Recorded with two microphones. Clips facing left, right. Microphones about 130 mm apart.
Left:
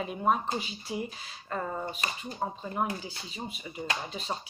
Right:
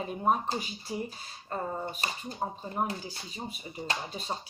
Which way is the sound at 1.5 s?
25° right (ahead or behind).